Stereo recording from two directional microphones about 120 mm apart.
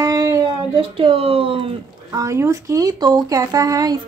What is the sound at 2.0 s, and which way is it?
Speech, 25° right (ahead or behind).